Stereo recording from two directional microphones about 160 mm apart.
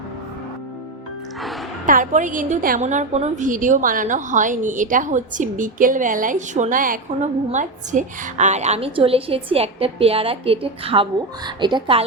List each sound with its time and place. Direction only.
1.9 s a woman's voice: 55° right (ahead or behind); by 12.0 s 30° right (ahead or behind)